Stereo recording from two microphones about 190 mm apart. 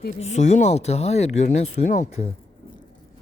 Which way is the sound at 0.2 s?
35° left (ahead or behind).